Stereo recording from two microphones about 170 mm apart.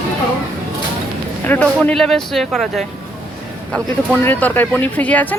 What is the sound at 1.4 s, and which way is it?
Speech, 10° left (ahead or behind).